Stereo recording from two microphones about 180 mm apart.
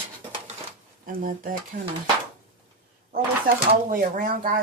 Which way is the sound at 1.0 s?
50° right (ahead or behind).